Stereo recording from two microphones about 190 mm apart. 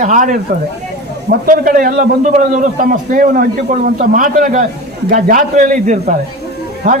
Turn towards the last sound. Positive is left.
turn(degrees=-40)  # may be behind; listen again after turning